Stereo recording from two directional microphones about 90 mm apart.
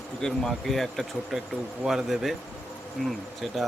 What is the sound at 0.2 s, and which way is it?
Speech, 5° left (ahead or behind).